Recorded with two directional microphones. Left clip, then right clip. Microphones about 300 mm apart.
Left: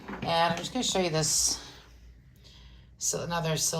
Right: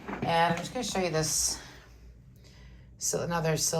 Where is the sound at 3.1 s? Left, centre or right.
Centre.